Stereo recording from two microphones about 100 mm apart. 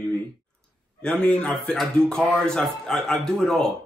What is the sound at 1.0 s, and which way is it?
A man's voice, 10° left (ahead or behind).